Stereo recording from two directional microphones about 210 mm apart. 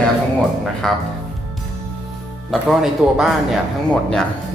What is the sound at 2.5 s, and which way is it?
Speech, centre (ahead or behind).